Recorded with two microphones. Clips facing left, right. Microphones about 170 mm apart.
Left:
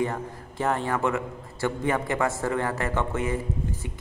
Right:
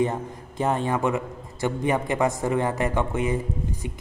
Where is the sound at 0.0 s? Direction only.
20° right (ahead or behind).